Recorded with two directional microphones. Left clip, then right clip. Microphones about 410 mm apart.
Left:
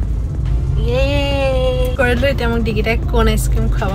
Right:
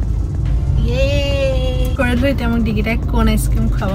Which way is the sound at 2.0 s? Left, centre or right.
Centre.